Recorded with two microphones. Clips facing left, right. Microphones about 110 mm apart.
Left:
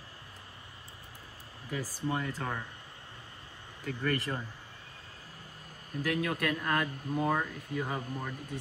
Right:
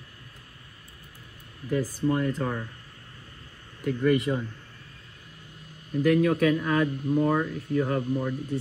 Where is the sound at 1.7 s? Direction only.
Centre (ahead or behind).